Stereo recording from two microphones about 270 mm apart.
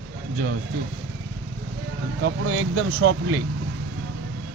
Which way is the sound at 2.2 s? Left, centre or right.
Right.